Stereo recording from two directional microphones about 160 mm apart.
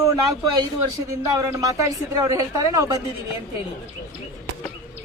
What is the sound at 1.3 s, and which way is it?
Speech, 20° right (ahead or behind).